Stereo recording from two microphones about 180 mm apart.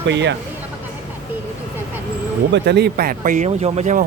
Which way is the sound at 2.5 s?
65° right (ahead or behind).